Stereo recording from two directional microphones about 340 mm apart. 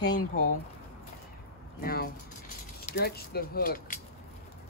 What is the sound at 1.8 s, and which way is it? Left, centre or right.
Speech, left.